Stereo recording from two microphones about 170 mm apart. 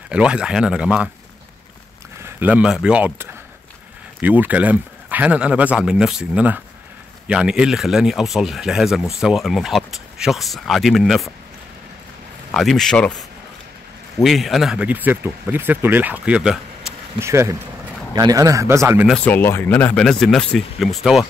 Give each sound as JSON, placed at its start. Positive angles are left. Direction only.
{"t": 0.1, "sound": "speech", "side_deg": -5}
{"t": 2.2, "sound": "speech", "side_deg": -10}
{"t": 12.4, "sound": "speech", "side_deg": 0}
{"t": 14.2, "sound": "speech", "side_deg": 0}
{"t": 17.2, "sound": "speech", "side_deg": -15}
{"t": 19.1, "sound": "speech", "side_deg": 10}